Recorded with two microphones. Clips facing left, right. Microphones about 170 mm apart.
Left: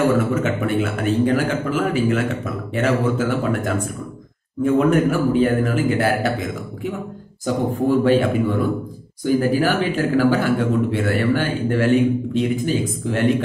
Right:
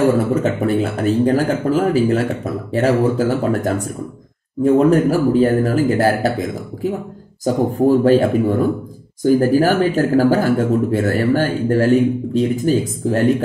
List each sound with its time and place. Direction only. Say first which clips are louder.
0.2 s speech: right 3 dB; 35° right (ahead or behind)
7.4 s speech: right 4 dB; 40° right (ahead or behind)